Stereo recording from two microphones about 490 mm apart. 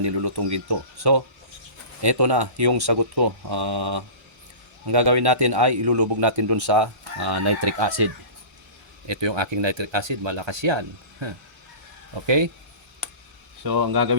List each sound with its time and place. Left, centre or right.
0.0 s a man's voice: right
13.7 s a man's voice: right